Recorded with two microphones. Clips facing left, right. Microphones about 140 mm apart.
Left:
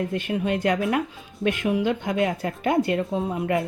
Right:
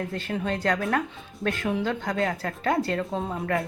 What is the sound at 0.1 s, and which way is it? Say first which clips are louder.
A woman's voice: left 4 dB; 15° left (ahead or behind).